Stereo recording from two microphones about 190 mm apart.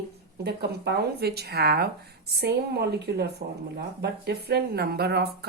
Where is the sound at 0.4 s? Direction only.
55° right (ahead or behind).